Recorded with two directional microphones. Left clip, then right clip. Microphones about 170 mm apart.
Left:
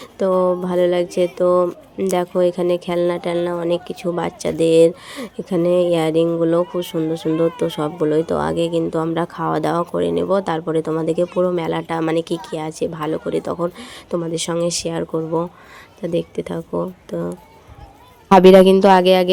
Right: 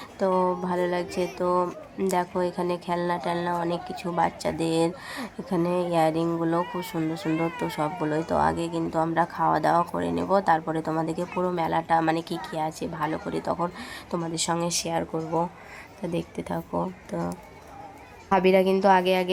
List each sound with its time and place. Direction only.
0.2 s speech: 30° left (ahead or behind)
18.3 s speech: 60° left (ahead or behind)